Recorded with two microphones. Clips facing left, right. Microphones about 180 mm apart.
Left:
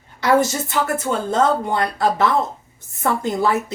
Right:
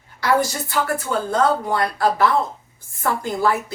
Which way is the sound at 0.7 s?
20° left (ahead or behind).